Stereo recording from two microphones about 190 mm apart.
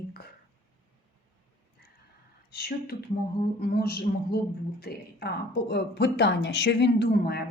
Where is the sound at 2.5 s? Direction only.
55° left (ahead or behind).